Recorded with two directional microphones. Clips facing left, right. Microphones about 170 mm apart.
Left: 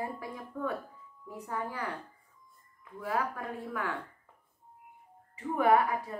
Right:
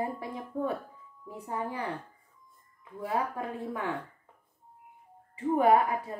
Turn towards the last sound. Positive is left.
turn(degrees=-30)  # may be behind; listen again after turning